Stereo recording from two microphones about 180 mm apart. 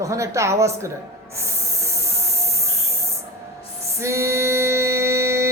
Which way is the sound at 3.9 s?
15° right (ahead or behind).